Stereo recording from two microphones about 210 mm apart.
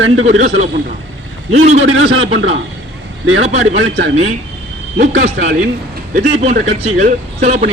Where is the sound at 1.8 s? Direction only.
75° right (ahead or behind).